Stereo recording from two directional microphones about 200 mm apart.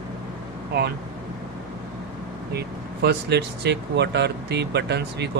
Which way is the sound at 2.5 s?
55° right (ahead or behind).